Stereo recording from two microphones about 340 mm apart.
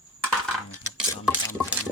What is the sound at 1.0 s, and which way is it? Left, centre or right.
Stir, centre.